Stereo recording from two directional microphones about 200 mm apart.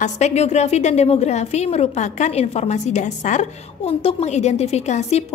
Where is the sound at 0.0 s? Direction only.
35° left (ahead or behind).